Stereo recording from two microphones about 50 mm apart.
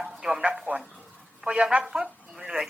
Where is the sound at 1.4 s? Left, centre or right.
Centre.